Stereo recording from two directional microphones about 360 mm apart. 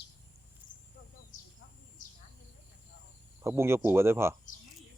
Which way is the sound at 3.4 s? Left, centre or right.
Centre.